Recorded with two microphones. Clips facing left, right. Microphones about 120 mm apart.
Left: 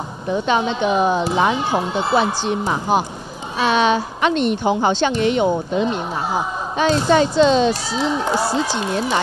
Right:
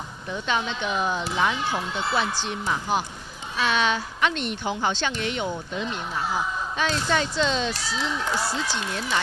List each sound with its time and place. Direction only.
0.5 s a woman's voice: 15° left (ahead or behind)
3.7 s a woman's voice: 15° left (ahead or behind)